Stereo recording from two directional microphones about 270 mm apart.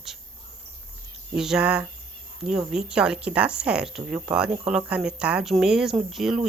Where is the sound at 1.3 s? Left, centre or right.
Centre.